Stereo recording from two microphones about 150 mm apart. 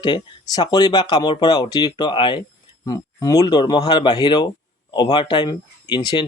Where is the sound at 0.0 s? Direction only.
30° left (ahead or behind).